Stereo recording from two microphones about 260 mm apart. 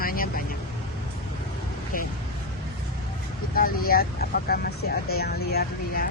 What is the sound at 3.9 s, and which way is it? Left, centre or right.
Speech, left.